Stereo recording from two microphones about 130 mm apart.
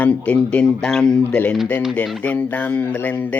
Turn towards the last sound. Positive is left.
turn(degrees=10)  # may be behind; listen again after turning